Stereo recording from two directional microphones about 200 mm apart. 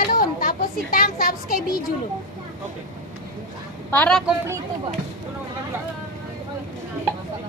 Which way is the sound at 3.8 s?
5° left (ahead or behind).